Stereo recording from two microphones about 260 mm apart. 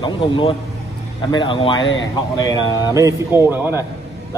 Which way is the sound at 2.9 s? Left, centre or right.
Centre.